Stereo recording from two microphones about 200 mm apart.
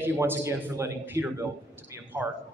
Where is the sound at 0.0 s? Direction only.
10° right (ahead or behind).